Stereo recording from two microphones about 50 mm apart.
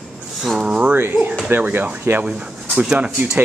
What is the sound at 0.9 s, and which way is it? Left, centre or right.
Speech, right.